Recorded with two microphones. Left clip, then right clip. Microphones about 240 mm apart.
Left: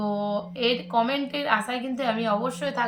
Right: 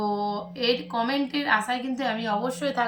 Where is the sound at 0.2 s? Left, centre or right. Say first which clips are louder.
Left 2 dB; centre.